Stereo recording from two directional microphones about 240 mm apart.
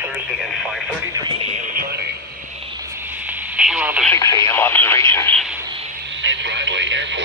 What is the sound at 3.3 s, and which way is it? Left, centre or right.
Radio, centre.